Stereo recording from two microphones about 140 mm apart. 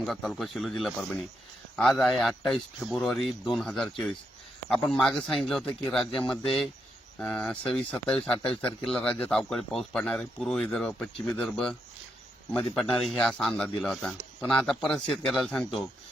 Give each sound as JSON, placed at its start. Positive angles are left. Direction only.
{"t": 0.0, "sound": "speech", "side_deg": 0}